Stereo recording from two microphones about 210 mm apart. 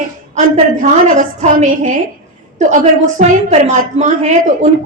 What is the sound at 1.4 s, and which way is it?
A woman's voice, 35° right (ahead or behind).